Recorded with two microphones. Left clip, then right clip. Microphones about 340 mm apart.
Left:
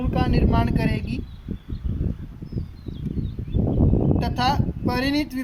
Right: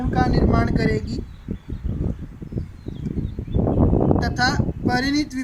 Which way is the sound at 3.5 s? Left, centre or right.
Right.